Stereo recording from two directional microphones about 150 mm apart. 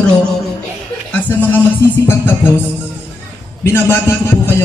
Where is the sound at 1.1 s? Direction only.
15° left (ahead or behind).